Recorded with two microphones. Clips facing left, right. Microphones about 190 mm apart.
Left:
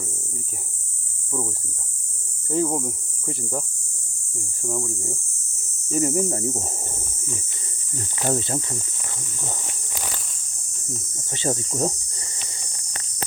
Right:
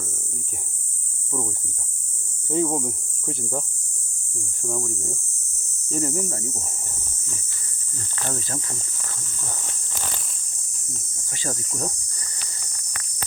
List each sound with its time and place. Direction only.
2.5 s speech: centre (ahead or behind)
5.9 s speech: 20° left (ahead or behind)
8.3 s speech: 25° left (ahead or behind)
9.4 s walk: 15° left (ahead or behind)
11.3 s cricket: 25° left (ahead or behind)